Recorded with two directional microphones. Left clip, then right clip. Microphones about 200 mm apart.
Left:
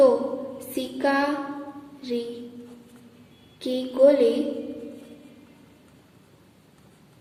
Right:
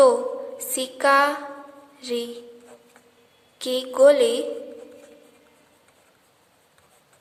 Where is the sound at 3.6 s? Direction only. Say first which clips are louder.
Right 2 dB; 50° right (ahead or behind).